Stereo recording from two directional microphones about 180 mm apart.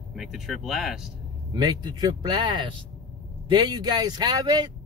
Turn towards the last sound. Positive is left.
turn(degrees=-25)  # may be behind; listen again after turning